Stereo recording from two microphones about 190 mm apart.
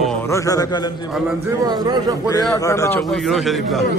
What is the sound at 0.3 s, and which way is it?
Music, 20° left (ahead or behind).